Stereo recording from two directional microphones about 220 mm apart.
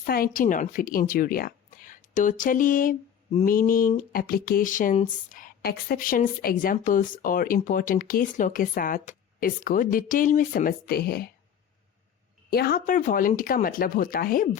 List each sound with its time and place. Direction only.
0.0 s speech: 40° left (ahead or behind)
12.5 s speech: 45° left (ahead or behind)